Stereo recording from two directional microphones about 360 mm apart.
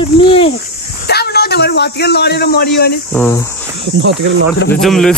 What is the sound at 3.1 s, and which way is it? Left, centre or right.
Speech, centre.